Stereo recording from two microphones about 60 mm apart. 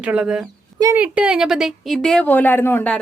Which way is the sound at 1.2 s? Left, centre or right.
Centre.